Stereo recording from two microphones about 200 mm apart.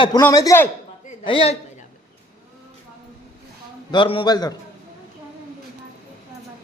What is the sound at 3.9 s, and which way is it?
Speech, 25° left (ahead or behind).